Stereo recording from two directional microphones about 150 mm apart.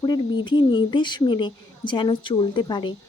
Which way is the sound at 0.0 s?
30° left (ahead or behind).